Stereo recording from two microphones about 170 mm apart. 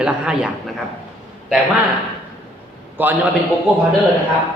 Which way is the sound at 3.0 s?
10° right (ahead or behind).